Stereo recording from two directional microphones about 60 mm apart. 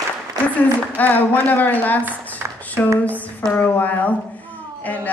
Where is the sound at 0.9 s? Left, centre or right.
Left.